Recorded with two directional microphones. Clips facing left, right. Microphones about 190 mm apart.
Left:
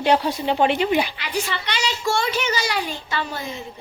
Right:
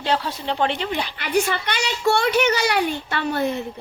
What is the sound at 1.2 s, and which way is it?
A child's voice, 50° right (ahead or behind).